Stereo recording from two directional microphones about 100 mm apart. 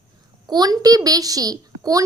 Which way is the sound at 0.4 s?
40° right (ahead or behind).